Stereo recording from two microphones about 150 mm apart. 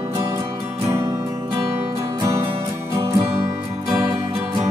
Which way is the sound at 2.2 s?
20° right (ahead or behind).